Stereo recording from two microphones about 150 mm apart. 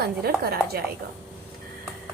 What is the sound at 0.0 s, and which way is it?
Speech, 90° right.